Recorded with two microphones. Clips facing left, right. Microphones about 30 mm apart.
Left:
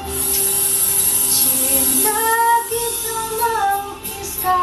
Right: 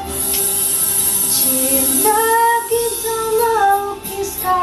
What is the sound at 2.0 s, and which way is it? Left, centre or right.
Female singing, right.